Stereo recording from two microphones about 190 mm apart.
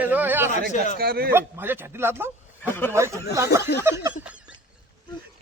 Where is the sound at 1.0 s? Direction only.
55° right (ahead or behind).